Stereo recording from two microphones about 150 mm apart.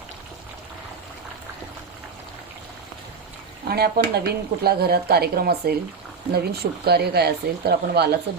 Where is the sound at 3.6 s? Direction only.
90° right.